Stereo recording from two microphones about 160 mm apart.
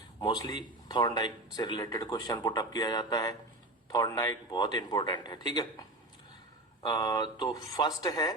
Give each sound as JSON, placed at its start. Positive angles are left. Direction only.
{"t": 0.2, "sound": "speech", "side_deg": 25}
{"t": 6.8, "sound": "speech", "side_deg": 25}